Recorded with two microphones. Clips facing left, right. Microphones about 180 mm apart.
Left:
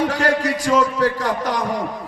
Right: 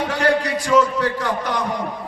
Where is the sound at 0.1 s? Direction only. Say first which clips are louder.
Even; 40° left (ahead or behind).